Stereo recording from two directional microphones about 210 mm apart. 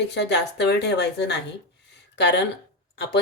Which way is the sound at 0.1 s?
55° left (ahead or behind).